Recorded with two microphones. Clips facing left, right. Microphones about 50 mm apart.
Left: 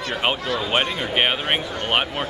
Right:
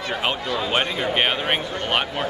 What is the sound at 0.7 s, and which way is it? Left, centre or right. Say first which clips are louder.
Speech: right 1 dB; centre.